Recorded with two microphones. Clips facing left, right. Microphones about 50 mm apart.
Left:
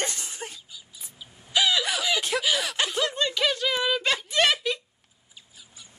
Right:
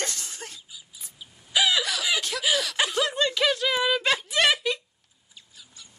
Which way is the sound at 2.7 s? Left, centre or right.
Centre.